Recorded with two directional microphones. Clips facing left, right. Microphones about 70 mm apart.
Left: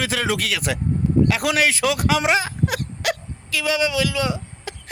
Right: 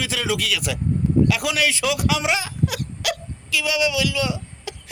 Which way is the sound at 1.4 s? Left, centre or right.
Left.